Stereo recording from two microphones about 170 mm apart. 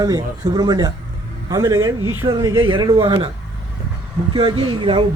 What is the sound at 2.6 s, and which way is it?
Speech, 30° right (ahead or behind).